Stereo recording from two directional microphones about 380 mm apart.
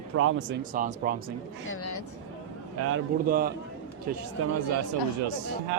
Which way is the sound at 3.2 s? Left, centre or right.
Right.